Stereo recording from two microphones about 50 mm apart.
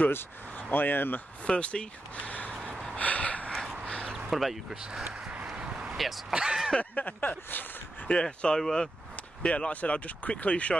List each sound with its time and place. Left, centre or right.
0.6 s speech: left
1.4 s speech: left
3.0 s gasp: left
3.5 s a sound: centre
3.8 s a sound: centre
4.3 s speech: centre
5.6 s a sound: centre
5.9 s speech: centre
6.3 s speech: centre
6.8 s speech: left
8.1 s speech: centre
8.5 s speech: centre
9.4 s speech: centre
9.7 s speech: left